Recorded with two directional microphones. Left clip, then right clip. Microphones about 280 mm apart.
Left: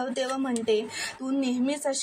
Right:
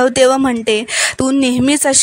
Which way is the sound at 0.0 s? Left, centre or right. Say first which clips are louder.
Right 18 dB; right.